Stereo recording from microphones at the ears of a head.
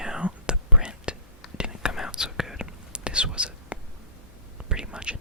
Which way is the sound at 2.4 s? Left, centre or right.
Centre.